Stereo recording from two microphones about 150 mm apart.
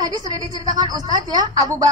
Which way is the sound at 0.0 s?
25° right (ahead or behind).